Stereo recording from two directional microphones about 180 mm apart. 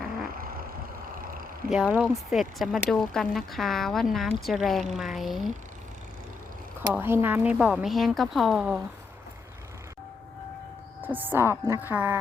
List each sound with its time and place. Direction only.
0.3 s vehicle: 55° right (ahead or behind)
1.7 s speech: 5° right (ahead or behind)
6.9 s speech: 10° right (ahead or behind)
11.0 s a woman's voice: 10° right (ahead or behind)